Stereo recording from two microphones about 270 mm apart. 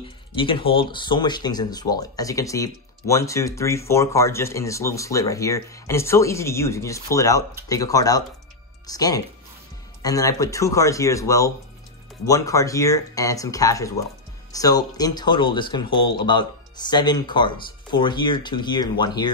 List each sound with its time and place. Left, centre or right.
0.0 s speech: centre